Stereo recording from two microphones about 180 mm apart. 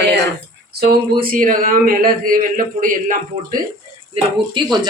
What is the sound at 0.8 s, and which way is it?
Speech, 55° right (ahead or behind).